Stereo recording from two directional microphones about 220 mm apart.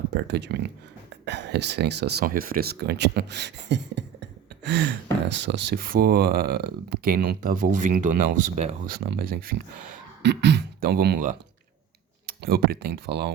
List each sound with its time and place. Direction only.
0.1 s speech: 50° right (ahead or behind)
12.5 s speech: 45° right (ahead or behind)